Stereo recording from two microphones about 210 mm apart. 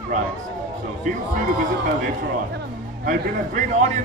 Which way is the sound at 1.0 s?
35° right (ahead or behind).